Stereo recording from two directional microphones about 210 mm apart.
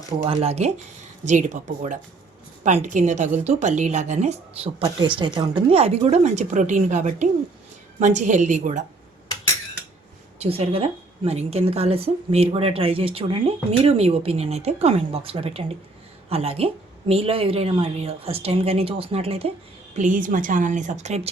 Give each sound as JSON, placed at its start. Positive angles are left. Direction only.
{"t": 0.2, "sound": "a woman's voice", "side_deg": -30}
{"t": 10.4, "sound": "a woman's voice", "side_deg": -30}
{"t": 20.0, "sound": "a woman's voice", "side_deg": -40}